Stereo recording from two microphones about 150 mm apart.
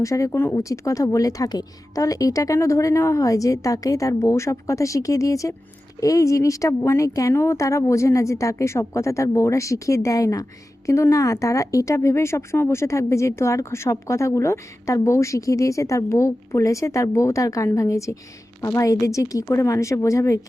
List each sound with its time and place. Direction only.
0.0 s speech: 20° left (ahead or behind)